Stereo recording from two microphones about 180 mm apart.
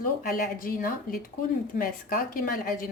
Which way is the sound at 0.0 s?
55° left (ahead or behind).